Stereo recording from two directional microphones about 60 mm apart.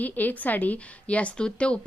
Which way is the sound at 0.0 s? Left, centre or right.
Left.